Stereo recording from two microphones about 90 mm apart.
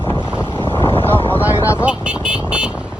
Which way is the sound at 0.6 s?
70° left (ahead or behind).